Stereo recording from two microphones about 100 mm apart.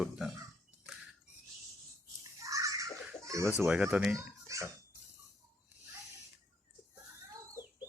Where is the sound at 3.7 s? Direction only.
15° right (ahead or behind).